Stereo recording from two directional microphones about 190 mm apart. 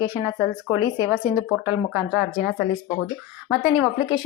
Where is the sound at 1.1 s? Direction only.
5° right (ahead or behind).